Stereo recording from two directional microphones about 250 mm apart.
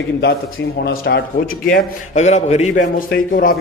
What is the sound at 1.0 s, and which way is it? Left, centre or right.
A man's voice, left.